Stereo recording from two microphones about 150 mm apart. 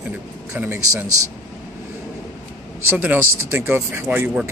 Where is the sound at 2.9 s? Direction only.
10° right (ahead or behind).